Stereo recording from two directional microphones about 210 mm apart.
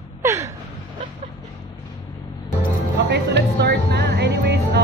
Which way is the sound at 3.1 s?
55° right (ahead or behind).